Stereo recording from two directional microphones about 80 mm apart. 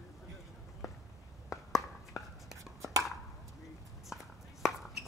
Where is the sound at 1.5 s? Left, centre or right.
Left.